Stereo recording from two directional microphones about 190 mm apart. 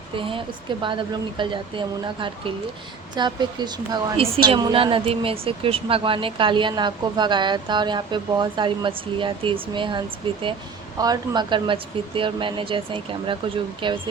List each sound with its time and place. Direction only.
0.2 s a woman's voice: 25° right (ahead or behind)